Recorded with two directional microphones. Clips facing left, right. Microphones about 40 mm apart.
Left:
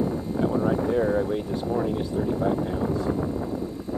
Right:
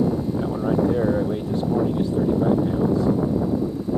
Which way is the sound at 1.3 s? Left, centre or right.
Centre.